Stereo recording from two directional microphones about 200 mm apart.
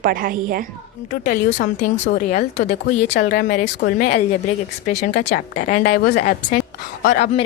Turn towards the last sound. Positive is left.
turn(degrees=35)  # may be behind; listen again after turning